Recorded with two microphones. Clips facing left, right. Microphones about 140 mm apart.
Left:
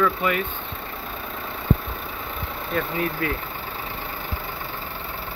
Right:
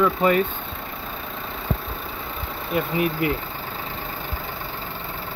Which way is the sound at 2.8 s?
15° right (ahead or behind).